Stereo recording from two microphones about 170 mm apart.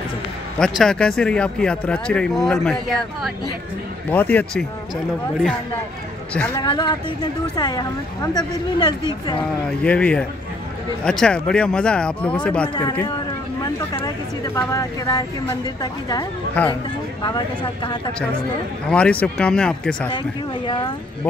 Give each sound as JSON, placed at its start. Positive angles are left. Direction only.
{"t": 0.6, "sound": "speech", "side_deg": 5}
{"t": 4.1, "sound": "speech", "side_deg": 10}
{"t": 6.3, "sound": "speech", "side_deg": 10}
{"t": 6.6, "sound": "speech", "side_deg": 25}
{"t": 9.8, "sound": "speech", "side_deg": 5}
{"t": 12.6, "sound": "speech", "side_deg": 25}
{"t": 13.9, "sound": "speech", "side_deg": 20}
{"t": 16.6, "sound": "speech", "side_deg": 10}
{"t": 18.9, "sound": "speech", "side_deg": 5}
{"t": 20.6, "sound": "speech", "side_deg": 30}